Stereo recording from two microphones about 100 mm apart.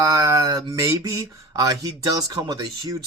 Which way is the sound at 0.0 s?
35° right (ahead or behind).